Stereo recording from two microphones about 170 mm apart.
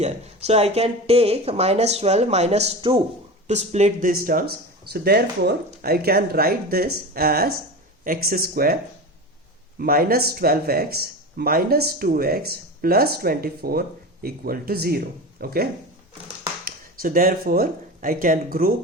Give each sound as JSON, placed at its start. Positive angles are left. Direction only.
{"t": 0.0, "sound": "speech", "side_deg": -40}
{"t": 4.1, "sound": "speech", "side_deg": -55}
{"t": 4.9, "sound": "speech", "side_deg": -70}
{"t": 16.6, "sound": "speech", "side_deg": -55}